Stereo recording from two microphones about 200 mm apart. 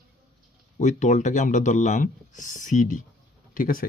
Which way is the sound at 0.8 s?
35° left (ahead or behind).